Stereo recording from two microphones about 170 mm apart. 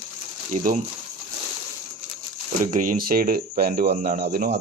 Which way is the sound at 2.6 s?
50° right (ahead or behind).